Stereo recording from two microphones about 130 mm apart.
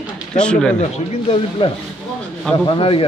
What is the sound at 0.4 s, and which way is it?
Speech, 5° left (ahead or behind).